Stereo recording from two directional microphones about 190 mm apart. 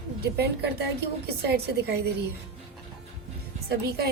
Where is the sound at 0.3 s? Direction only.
60° right (ahead or behind).